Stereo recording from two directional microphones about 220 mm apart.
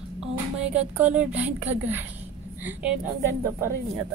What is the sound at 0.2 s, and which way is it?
A woman's voice, 5° right (ahead or behind).